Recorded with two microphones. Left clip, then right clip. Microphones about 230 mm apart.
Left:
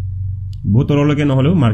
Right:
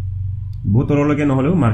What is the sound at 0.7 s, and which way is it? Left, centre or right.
Speech, left.